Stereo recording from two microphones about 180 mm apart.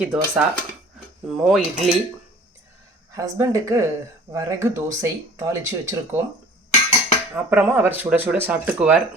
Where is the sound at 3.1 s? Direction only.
20° right (ahead or behind).